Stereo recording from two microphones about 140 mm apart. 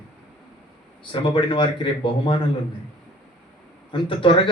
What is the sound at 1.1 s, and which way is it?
A man's voice, 35° left (ahead or behind).